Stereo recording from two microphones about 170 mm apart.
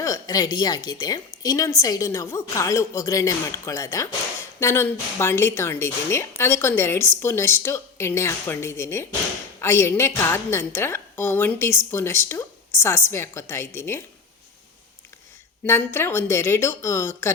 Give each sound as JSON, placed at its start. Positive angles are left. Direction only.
{"t": 0.0, "sound": "a woman's voice", "side_deg": 20}
{"t": 15.6, "sound": "a woman's voice", "side_deg": 15}